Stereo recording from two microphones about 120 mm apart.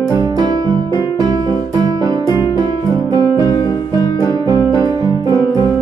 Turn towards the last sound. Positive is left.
turn(degrees=-35)  # may be behind; listen again after turning